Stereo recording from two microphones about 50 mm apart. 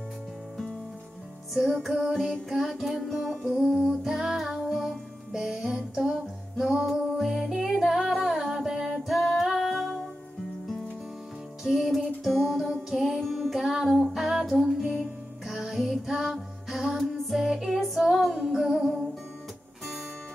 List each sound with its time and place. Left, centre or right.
1.5 s music: centre
3.6 s music: centre
11.6 s music: centre